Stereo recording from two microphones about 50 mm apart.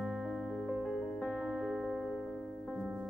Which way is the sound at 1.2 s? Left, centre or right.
Centre.